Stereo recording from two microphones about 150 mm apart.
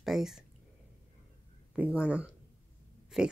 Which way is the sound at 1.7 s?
10° right (ahead or behind).